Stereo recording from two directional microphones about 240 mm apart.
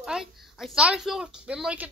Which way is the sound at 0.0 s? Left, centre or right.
Centre.